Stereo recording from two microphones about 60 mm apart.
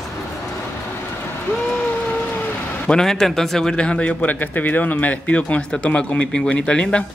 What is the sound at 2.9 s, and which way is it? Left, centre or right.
Speech, centre.